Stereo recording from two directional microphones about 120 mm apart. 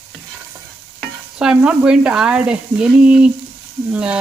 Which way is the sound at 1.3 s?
5° right (ahead or behind).